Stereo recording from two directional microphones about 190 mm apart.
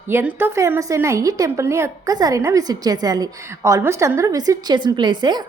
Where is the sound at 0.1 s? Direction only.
10° right (ahead or behind).